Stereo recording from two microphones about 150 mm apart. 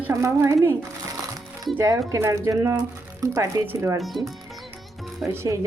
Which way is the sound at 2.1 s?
20° right (ahead or behind).